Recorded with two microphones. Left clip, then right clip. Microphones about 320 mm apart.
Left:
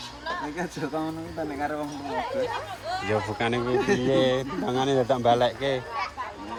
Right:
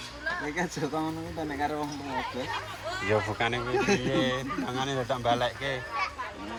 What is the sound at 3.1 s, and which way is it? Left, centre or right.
Speech, centre.